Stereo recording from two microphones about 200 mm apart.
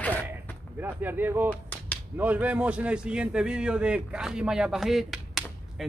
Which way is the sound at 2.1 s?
10° right (ahead or behind).